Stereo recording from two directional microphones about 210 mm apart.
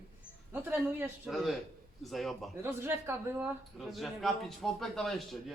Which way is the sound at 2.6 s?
10° right (ahead or behind).